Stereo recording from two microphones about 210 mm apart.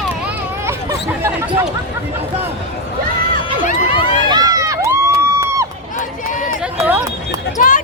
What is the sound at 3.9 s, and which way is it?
Run, 25° left (ahead or behind).